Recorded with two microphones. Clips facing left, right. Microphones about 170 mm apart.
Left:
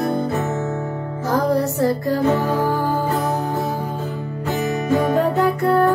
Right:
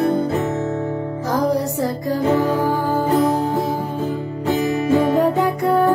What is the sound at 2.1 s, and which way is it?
Music, 10° right (ahead or behind).